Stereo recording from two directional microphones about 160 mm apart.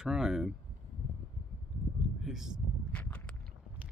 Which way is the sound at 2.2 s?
5° right (ahead or behind).